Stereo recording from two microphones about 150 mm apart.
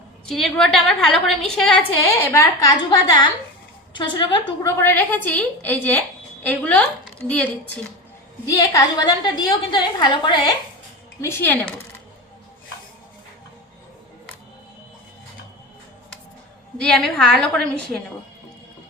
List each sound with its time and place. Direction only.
0.3 s a woman's voice: 5° left (ahead or behind)
2.0 s a woman's voice: 20° left (ahead or behind)
4.6 s a woman's voice: 15° left (ahead or behind)
8.4 s a woman's voice: 25° left (ahead or behind)
11.2 s a woman's voice: 15° left (ahead or behind)
16.7 s a woman's voice: 5° left (ahead or behind)